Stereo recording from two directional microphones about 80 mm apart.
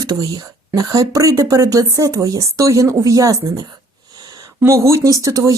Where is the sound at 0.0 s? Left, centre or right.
Right.